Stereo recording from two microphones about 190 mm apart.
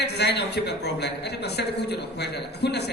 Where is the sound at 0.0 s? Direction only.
60° left (ahead or behind).